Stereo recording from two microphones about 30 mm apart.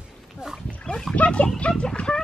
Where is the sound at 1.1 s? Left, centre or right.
Left.